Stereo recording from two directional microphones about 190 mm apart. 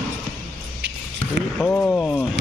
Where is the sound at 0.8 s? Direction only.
65° right (ahead or behind).